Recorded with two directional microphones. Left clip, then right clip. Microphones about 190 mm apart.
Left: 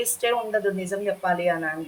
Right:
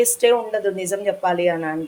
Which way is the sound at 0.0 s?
40° right (ahead or behind).